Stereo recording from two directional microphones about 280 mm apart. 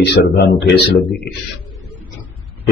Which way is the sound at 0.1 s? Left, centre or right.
Left.